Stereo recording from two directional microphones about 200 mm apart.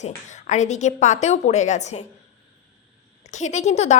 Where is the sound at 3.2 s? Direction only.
35° left (ahead or behind).